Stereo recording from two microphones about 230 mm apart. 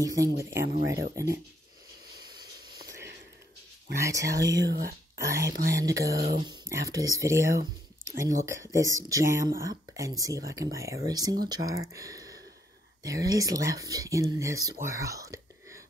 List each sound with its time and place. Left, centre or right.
0.0 s speech: centre
4.0 s speech: centre
4.4 s speech: right
5.7 s speech: centre
6.1 s speech: right
6.4 s speech: centre
14.9 s whispering: centre